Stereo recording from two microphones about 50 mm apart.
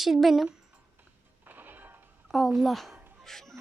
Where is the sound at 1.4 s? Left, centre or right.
Right.